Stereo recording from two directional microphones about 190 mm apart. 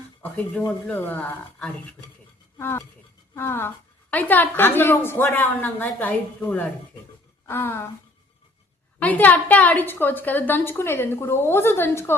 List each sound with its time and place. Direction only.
0.2 s a woman's voice: 5° left (ahead or behind)
9.0 s a woman's voice: 10° left (ahead or behind)